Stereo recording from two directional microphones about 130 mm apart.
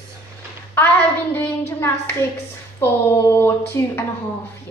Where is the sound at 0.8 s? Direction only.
15° left (ahead or behind).